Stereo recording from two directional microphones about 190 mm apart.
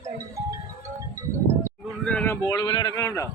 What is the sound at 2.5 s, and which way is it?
Speech, 20° left (ahead or behind).